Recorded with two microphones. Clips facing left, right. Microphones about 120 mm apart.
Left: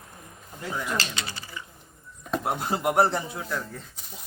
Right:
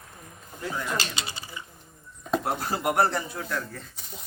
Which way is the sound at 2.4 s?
20° left (ahead or behind).